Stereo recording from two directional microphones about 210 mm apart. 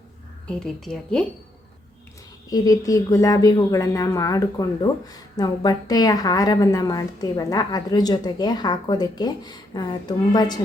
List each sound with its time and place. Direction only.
0.4 s a woman's voice: 5° left (ahead or behind)
2.5 s speech: 15° left (ahead or behind)